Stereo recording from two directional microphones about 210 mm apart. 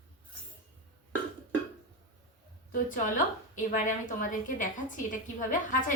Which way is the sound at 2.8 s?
40° left (ahead or behind).